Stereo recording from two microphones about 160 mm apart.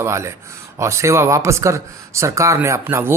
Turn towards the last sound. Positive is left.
turn(degrees=-15)  # may be behind; listen again after turning